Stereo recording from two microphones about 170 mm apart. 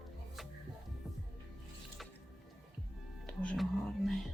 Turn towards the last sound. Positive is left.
turn(degrees=0)  # may be behind; listen again after turning